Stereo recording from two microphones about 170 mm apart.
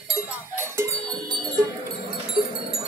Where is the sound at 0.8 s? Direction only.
20° right (ahead or behind).